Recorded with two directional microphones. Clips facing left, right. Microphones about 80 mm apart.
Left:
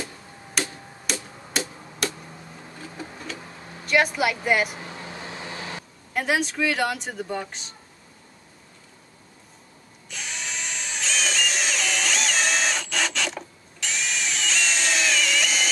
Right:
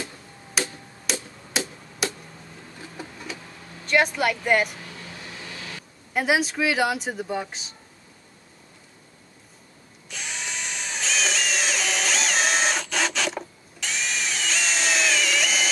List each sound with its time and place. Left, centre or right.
0.6 s tick-tock: centre
3.8 s speech: centre
4.8 s vehicle: left
6.1 s speech: centre
10.0 s drill: centre